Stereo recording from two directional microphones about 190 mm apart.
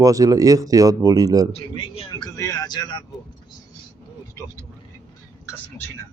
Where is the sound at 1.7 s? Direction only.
20° left (ahead or behind).